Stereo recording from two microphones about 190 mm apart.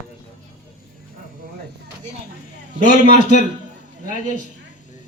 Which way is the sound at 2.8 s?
45° left (ahead or behind).